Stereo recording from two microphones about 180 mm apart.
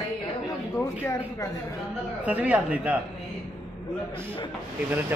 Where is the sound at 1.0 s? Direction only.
15° left (ahead or behind).